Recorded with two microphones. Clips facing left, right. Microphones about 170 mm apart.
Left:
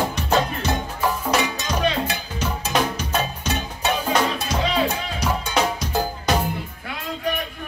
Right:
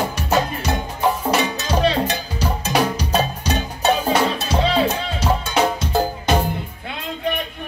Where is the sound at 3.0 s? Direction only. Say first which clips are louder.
Right 4 dB; 35° right (ahead or behind).